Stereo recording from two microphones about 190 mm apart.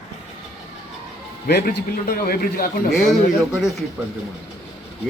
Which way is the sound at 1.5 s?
60° left (ahead or behind).